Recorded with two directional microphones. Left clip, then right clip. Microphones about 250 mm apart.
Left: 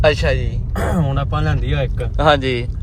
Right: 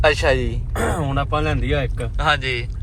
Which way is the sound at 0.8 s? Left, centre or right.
Right.